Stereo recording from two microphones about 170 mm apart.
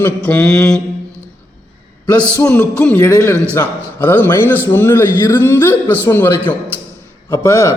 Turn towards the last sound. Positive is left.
turn(degrees=15)  # may be behind; listen again after turning